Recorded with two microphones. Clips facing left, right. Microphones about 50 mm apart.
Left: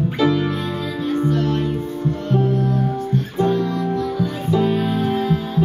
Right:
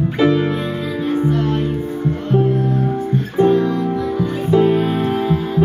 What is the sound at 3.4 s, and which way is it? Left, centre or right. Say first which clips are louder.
Music: right 6 dB; right.